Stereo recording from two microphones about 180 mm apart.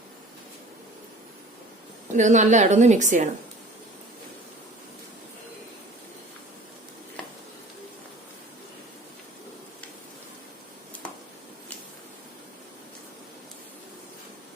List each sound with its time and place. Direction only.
2.1 s a woman's voice: 40° right (ahead or behind)